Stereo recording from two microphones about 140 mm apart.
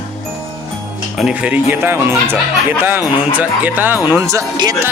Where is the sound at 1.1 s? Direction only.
5° right (ahead or behind).